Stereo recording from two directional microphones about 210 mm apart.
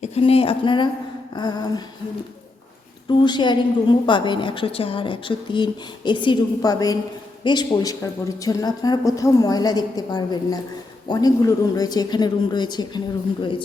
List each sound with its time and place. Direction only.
0.0 s a woman's voice: 30° left (ahead or behind)
3.1 s speech: 20° left (ahead or behind)